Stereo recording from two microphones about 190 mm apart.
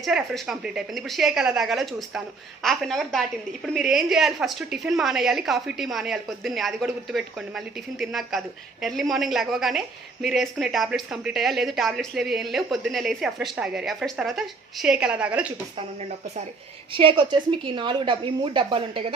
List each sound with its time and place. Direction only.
0.0 s a woman's voice: centre (ahead or behind)
16.9 s speech: 25° right (ahead or behind)